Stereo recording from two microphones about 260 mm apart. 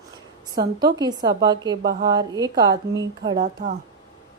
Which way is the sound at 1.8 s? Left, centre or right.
Right.